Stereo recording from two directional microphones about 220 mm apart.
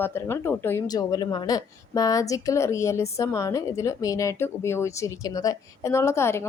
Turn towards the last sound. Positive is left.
turn(degrees=10)  # may be behind; listen again after turning